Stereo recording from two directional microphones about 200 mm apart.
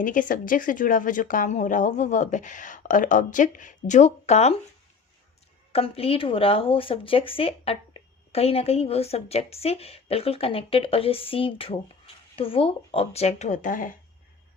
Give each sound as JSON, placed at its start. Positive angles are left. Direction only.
{"t": 0.0, "sound": "speech", "side_deg": 40}
{"t": 5.7, "sound": "a woman's voice", "side_deg": 30}